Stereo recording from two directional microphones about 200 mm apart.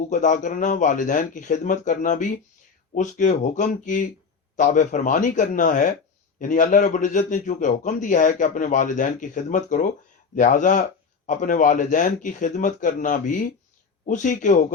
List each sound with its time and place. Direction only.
0.1 s a man's voice: 40° left (ahead or behind)